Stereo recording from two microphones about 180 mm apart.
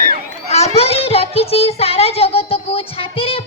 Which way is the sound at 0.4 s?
35° left (ahead or behind).